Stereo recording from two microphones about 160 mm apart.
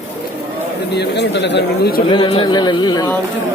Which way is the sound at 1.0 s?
90° left.